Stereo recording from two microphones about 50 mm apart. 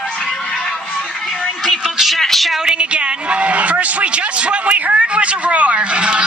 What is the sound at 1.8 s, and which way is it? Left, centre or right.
Speech, centre.